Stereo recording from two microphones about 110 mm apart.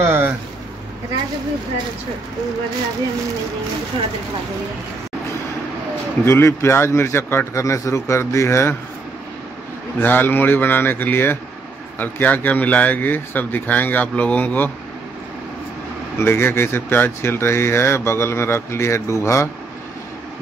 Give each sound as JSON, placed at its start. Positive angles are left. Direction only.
{"t": 0.0, "sound": "a sound", "side_deg": -20}
{"t": 6.2, "sound": "speech", "side_deg": 25}
{"t": 9.9, "sound": "speech", "side_deg": 15}
{"t": 16.2, "sound": "speech", "side_deg": 20}